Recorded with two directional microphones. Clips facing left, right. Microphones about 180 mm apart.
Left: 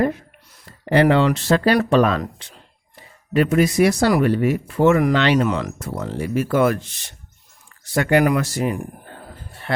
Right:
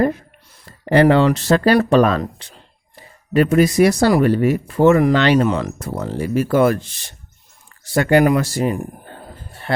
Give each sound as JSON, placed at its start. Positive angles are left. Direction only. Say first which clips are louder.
{"t": 0.9, "sound": "speech", "louder": "right 3 dB", "side_deg": -40}
{"t": 5.5, "sound": "speech", "louder": "right 3 dB", "side_deg": -30}